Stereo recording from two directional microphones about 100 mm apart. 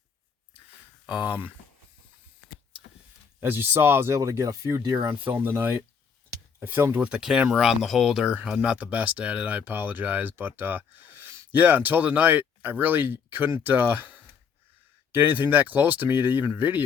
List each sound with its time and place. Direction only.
1.0 s speech: 10° right (ahead or behind)
3.4 s speech: 20° right (ahead or behind)
4.9 s speech: 20° right (ahead or behind)